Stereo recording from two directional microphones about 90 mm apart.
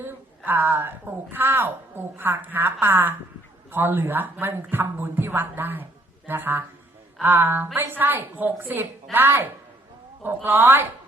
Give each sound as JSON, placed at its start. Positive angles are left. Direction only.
{"t": 0.4, "sound": "a woman's voice", "side_deg": -20}